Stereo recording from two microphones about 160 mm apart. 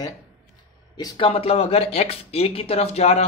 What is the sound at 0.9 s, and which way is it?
Speech, 30° left (ahead or behind).